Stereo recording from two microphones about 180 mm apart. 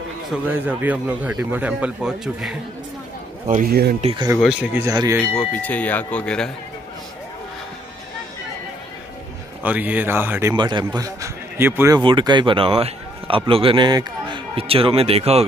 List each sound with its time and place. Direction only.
0.3 s a man's voice: 10° right (ahead or behind)
3.4 s a man's voice: 45° right (ahead or behind)
4.0 s a man's voice: 30° right (ahead or behind)
4.4 s speech: 5° right (ahead or behind)
4.8 s a man's voice: 20° right (ahead or behind)
5.3 s speech: 5° left (ahead or behind)
9.6 s a man's voice: 10° right (ahead or behind)
10.5 s a man's voice: 25° right (ahead or behind)
12.0 s a man's voice: 25° right (ahead or behind)